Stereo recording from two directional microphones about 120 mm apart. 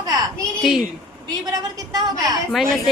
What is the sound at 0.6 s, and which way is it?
Speech, centre (ahead or behind).